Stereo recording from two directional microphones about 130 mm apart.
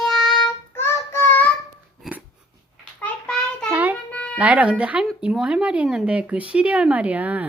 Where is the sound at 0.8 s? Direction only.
20° left (ahead or behind).